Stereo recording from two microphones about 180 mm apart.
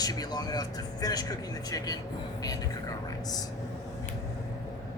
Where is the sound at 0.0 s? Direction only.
20° left (ahead or behind).